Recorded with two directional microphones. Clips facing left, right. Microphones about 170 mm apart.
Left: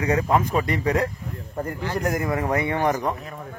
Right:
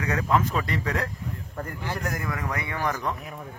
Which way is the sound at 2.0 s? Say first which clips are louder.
Left 8 dB; 15° left (ahead or behind).